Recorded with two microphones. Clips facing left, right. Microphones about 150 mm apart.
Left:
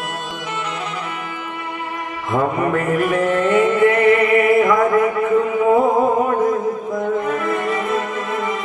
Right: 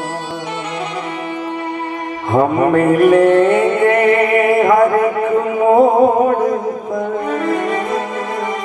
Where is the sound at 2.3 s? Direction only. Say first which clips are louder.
Right 6 dB; 35° right (ahead or behind).